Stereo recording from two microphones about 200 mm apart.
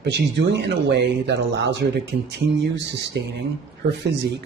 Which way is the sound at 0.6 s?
60° right (ahead or behind).